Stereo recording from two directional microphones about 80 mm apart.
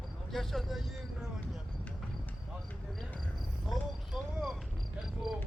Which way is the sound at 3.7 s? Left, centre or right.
Centre.